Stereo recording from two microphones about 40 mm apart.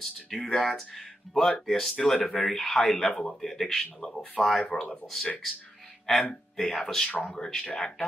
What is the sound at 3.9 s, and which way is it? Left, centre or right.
Speech, centre.